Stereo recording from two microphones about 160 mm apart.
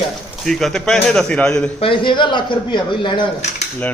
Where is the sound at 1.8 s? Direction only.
30° left (ahead or behind).